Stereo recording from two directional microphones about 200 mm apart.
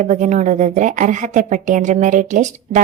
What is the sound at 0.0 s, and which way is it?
A woman's voice, 35° right (ahead or behind).